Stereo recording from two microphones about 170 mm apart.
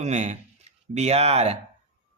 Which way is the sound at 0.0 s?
40° right (ahead or behind).